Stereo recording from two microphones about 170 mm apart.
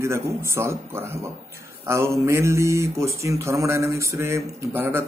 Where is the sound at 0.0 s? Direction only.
15° right (ahead or behind).